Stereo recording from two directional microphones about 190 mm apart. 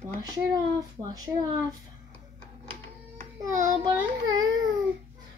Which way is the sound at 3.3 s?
20° right (ahead or behind).